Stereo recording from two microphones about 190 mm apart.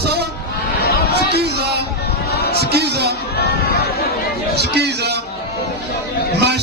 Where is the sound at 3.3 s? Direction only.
55° left (ahead or behind).